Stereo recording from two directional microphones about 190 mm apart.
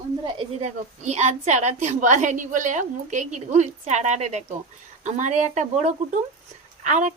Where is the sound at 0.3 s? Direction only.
35° right (ahead or behind).